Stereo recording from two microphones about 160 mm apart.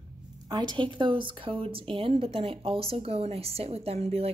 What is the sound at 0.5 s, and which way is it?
A woman's voice, 25° right (ahead or behind).